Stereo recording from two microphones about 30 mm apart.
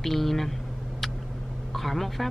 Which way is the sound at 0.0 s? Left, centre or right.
Centre.